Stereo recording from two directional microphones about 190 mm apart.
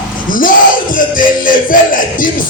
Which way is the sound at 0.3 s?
45° left (ahead or behind).